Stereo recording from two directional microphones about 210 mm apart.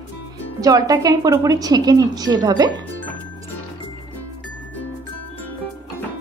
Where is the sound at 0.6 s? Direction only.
15° right (ahead or behind).